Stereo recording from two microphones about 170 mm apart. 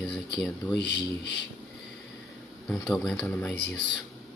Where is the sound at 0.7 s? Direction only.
90° left.